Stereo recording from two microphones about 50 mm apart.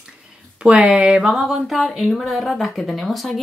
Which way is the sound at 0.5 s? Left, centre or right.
Right.